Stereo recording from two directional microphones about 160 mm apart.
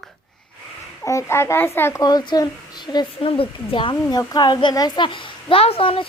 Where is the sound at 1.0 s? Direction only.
20° left (ahead or behind).